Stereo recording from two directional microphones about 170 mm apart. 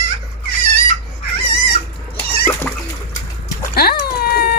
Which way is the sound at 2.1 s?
15° left (ahead or behind).